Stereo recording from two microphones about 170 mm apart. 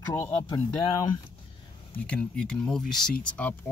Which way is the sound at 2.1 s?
5° left (ahead or behind).